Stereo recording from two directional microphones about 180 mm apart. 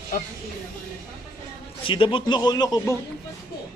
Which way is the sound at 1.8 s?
30° left (ahead or behind).